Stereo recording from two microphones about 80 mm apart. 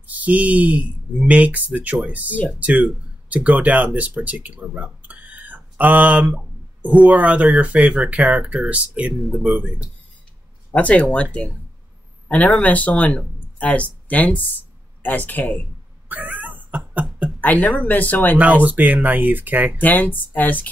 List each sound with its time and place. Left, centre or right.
0.0 s speech: centre
9.1 s speech: centre
10.7 s speech: centre
12.3 s speech: centre
16.1 s a sound: right
17.4 s speech: left
18.4 s speech: centre
19.8 s speech: left